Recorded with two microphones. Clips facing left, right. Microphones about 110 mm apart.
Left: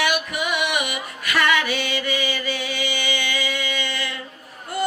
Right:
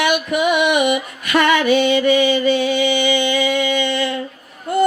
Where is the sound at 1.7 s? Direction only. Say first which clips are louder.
Right 12 dB; 20° right (ahead or behind).